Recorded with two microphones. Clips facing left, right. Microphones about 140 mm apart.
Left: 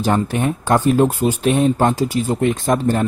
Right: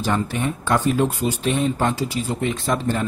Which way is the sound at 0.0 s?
50° left (ahead or behind).